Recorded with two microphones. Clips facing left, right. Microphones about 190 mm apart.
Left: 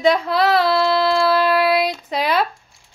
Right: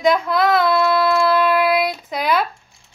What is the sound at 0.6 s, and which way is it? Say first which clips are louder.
Child singing: even; 30° left (ahead or behind).